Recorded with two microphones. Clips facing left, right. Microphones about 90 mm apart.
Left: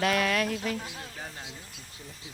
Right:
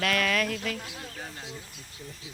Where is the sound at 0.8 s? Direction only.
5° left (ahead or behind).